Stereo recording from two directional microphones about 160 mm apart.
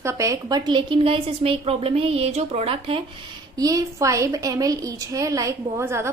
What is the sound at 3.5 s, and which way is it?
A woman's voice, 20° right (ahead or behind).